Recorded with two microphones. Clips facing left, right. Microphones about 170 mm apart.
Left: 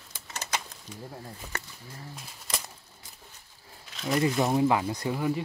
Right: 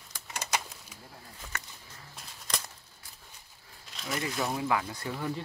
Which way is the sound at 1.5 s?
35° left (ahead or behind).